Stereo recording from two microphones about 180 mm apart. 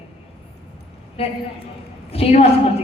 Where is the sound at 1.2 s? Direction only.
30° left (ahead or behind).